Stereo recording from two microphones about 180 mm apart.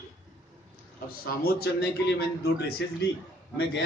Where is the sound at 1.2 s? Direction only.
60° left (ahead or behind).